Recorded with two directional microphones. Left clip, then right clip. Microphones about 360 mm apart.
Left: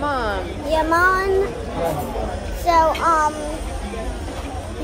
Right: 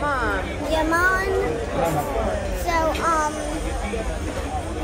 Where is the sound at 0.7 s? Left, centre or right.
Centre.